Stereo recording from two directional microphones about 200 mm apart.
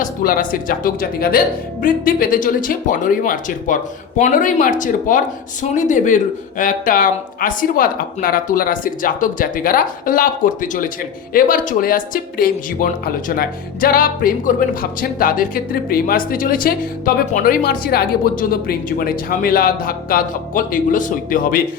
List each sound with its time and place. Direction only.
0.0 s speech: 45° left (ahead or behind)